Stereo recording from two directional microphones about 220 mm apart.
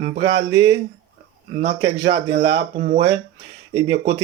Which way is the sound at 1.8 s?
20° right (ahead or behind).